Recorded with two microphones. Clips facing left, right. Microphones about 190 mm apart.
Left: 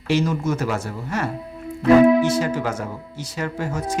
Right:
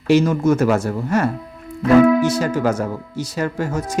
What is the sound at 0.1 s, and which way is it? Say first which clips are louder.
Speech: right 6 dB; 50° right (ahead or behind).